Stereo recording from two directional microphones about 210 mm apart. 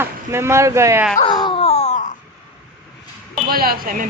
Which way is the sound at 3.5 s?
45° right (ahead or behind).